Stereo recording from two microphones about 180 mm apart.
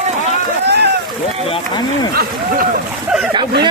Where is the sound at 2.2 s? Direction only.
50° right (ahead or behind).